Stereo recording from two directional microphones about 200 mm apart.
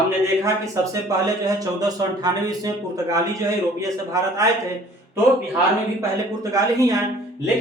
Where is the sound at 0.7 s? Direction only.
15° right (ahead or behind).